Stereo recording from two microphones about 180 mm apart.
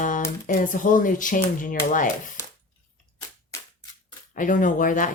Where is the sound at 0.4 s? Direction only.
45° left (ahead or behind).